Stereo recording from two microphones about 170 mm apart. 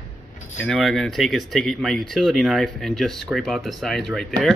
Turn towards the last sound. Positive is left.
turn(degrees=0)  # may be behind; listen again after turning